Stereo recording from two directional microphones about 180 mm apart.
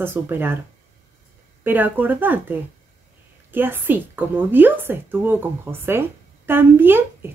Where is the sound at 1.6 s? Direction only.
10° right (ahead or behind).